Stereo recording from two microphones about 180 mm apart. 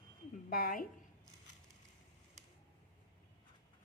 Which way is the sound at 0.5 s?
55° left (ahead or behind).